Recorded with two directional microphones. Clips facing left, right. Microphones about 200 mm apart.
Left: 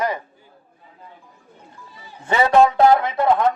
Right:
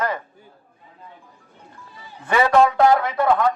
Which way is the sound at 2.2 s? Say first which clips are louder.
Left 1 dB; 25° left (ahead or behind).